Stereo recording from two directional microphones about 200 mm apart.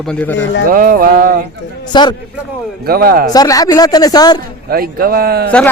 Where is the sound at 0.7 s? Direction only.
45° right (ahead or behind).